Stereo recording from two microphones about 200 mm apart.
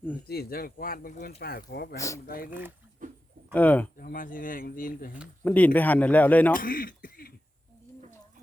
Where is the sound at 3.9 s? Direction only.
45° left (ahead or behind).